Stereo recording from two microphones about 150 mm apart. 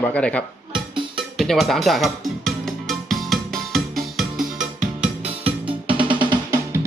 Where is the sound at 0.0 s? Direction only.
5° left (ahead or behind).